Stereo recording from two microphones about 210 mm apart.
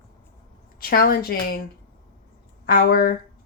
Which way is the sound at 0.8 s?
45° left (ahead or behind).